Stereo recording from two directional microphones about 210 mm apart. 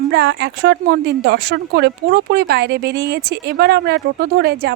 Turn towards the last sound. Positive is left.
turn(degrees=-45)  # may be behind; listen again after turning